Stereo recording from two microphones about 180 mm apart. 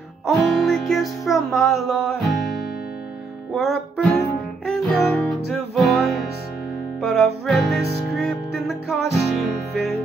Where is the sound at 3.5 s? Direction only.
Centre (ahead or behind).